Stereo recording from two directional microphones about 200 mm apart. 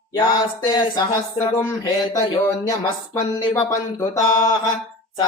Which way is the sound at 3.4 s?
15° left (ahead or behind).